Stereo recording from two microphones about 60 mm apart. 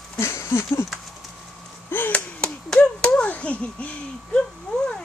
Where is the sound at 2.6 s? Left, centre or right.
Centre.